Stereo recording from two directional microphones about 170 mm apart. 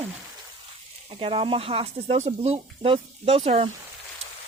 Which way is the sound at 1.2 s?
30° right (ahead or behind).